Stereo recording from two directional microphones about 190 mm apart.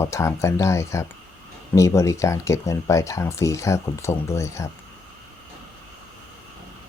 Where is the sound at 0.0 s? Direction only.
15° left (ahead or behind).